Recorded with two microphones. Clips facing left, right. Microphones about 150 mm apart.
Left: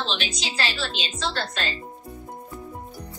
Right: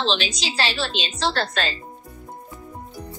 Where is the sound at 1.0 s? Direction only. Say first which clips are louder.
Right 6 dB; 80° right.